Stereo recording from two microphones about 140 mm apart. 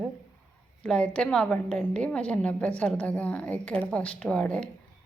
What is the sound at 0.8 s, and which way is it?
A woman's voice, 10° left (ahead or behind).